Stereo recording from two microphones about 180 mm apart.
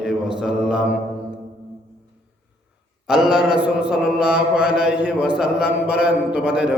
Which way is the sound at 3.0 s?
5° right (ahead or behind).